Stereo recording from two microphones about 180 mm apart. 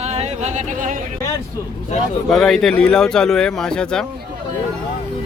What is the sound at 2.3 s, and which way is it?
Speech, centre (ahead or behind).